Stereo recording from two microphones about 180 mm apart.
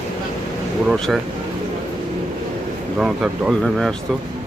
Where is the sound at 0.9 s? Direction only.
Centre (ahead or behind).